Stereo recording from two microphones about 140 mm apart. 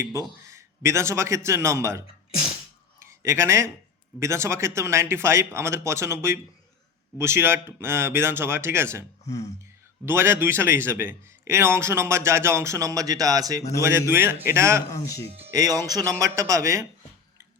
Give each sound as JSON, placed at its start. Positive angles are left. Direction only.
{"t": 0.4, "sound": "a man's voice", "side_deg": -20}
{"t": 3.0, "sound": "a sound", "side_deg": -20}
{"t": 4.2, "sound": "speech", "side_deg": -20}
{"t": 10.1, "sound": "speech", "side_deg": -15}
{"t": 14.8, "sound": "speech", "side_deg": 25}
{"t": 15.4, "sound": "speech", "side_deg": -25}